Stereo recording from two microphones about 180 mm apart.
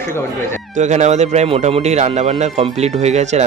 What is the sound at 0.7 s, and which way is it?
Speech, 40° right (ahead or behind).